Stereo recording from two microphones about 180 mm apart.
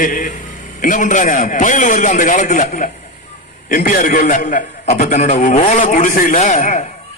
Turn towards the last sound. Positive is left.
turn(degrees=40)  # may be behind; listen again after turning